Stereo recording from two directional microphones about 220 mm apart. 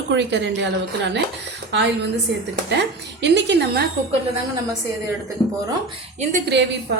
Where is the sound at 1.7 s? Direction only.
50° right (ahead or behind).